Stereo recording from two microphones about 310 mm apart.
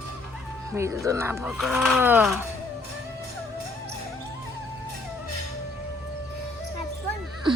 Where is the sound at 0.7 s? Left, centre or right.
Centre.